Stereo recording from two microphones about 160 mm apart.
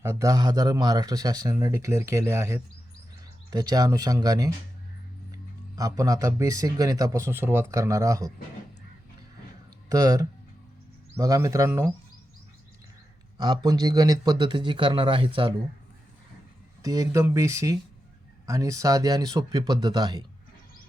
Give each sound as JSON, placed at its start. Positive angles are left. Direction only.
{"t": 0.0, "sound": "speech", "side_deg": -20}
{"t": 9.9, "sound": "speech", "side_deg": -25}
{"t": 13.4, "sound": "speech", "side_deg": -25}
{"t": 16.8, "sound": "speech", "side_deg": -20}